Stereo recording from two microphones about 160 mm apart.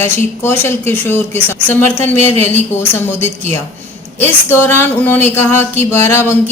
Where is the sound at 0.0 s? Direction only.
15° left (ahead or behind).